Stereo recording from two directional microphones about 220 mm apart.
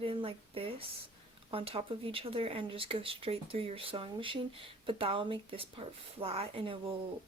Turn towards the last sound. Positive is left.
turn(degrees=-25)  # may be behind; listen again after turning